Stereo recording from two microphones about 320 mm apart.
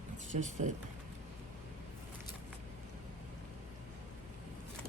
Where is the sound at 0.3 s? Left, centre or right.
Right.